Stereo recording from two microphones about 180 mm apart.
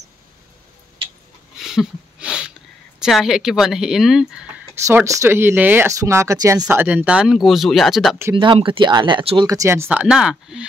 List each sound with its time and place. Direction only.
1.6 s a sound: 5° right (ahead or behind)
3.0 s speech: centre (ahead or behind)
4.8 s speech: 15° right (ahead or behind); by 8.2 s centre (ahead or behind)
8.4 s speech: 30° right (ahead or behind)
9.5 s speech: 15° right (ahead or behind)